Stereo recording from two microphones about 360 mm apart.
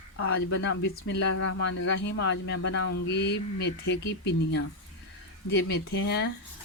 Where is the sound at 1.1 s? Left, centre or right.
Left.